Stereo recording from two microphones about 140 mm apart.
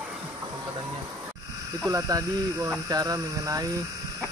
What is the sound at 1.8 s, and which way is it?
Speech, 25° right (ahead or behind).